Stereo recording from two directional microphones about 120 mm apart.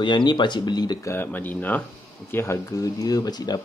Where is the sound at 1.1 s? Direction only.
15° left (ahead or behind).